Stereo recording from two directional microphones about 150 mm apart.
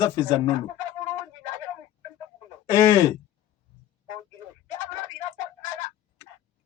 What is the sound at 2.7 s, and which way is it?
Speech, 20° left (ahead or behind).